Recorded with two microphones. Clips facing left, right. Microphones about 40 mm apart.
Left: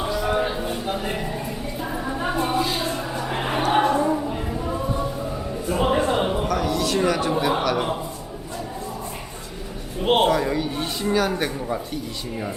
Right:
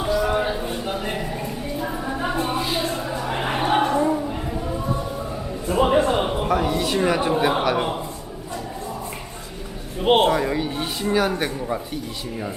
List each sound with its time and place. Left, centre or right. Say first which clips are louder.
0.0 s a sound: right 2 dB; centre
1.8 s music: even; centre
2.8 s a sound: right 1 dB; centre
5.6 s music: right 3 dB; centre
6.5 s speech: right 1 dB; right
10.0 s speech: right 1 dB; centre